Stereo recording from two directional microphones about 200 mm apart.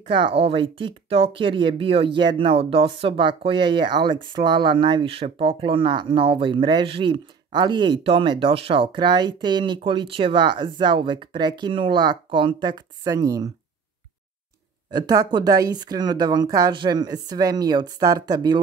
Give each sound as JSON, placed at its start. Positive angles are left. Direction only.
{"t": 0.1, "sound": "speech", "side_deg": -25}
{"t": 14.9, "sound": "speech", "side_deg": -20}